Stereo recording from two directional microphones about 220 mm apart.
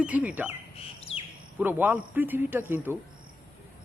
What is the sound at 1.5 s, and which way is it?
Speech, 10° right (ahead or behind).